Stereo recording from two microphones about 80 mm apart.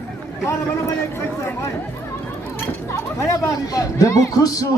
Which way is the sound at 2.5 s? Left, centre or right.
Left.